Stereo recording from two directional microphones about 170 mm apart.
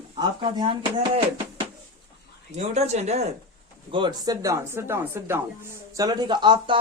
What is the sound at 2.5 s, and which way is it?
Speech, 40° right (ahead or behind).